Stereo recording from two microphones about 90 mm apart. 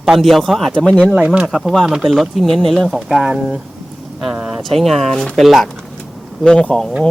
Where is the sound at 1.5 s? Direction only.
Centre (ahead or behind).